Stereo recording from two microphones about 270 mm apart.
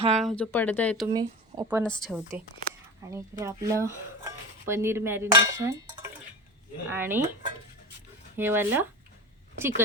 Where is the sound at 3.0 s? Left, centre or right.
Centre.